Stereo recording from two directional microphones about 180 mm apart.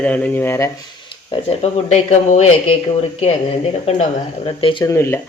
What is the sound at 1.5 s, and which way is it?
Speech, 35° left (ahead or behind).